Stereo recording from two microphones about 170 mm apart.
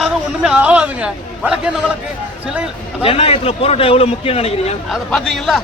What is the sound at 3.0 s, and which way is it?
A man's voice, 35° left (ahead or behind).